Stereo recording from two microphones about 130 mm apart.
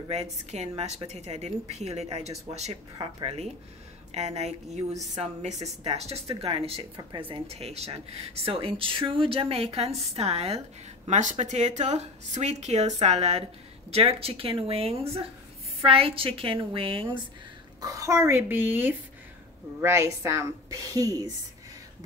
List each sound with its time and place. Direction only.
0.1 s speech: 55° right (ahead or behind)
4.1 s speech: 55° right (ahead or behind)
7.0 s speech: 35° right (ahead or behind); by 10.6 s 55° right (ahead or behind)
11.1 s speech: 65° right (ahead or behind); by 17.2 s 40° right (ahead or behind)
17.7 s a woman's voice: 25° right (ahead or behind)